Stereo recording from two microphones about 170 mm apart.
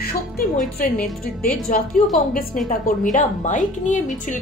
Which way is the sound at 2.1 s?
55° left (ahead or behind).